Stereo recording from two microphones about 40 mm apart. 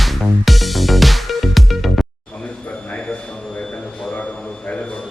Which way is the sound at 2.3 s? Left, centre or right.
Left.